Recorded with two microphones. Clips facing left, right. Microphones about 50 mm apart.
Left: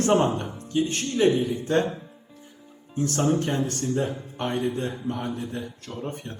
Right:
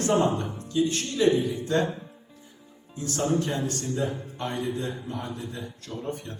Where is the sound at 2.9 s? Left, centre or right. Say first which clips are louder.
Left 3 dB; left.